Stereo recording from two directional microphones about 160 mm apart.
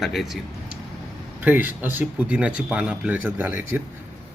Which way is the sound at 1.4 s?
10° right (ahead or behind).